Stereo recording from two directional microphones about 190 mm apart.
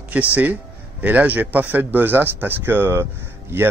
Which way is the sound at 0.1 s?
10° right (ahead or behind).